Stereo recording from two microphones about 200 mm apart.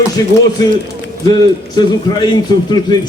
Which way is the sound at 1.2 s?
20° left (ahead or behind).